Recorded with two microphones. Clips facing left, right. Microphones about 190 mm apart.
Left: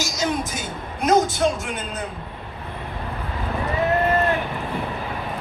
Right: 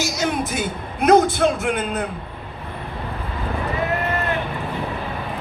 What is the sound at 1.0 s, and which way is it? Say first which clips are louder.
A man's voice: right 4 dB; 60° right (ahead or behind).